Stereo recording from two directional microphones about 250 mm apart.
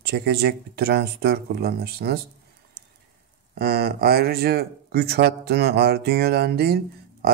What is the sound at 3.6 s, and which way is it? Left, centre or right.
Speech, right.